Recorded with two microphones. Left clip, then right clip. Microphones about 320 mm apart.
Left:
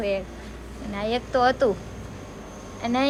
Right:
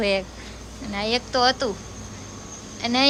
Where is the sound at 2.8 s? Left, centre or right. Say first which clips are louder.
Right 2 dB; centre.